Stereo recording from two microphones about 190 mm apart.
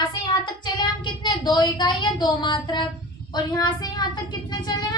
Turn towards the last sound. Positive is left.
turn(degrees=20)  # may be behind; listen again after turning